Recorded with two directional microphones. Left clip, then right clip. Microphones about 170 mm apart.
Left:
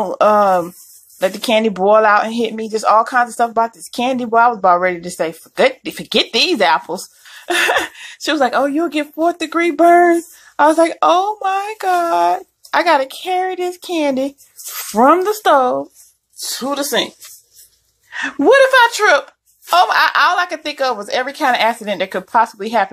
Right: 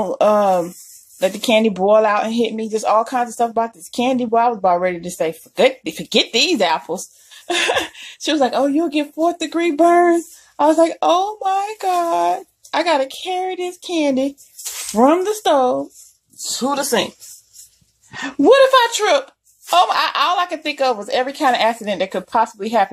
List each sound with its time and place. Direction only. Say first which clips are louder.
0.0 s speech: left 3 dB; centre (ahead or behind)
14.8 s speech: left 3 dB; centre (ahead or behind)
18.1 s speech: left 1 dB; centre (ahead or behind)